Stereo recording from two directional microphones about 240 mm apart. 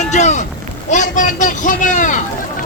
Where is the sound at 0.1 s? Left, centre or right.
Left.